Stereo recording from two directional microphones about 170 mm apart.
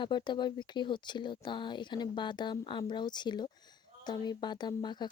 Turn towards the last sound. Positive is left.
turn(degrees=25)  # may be behind; listen again after turning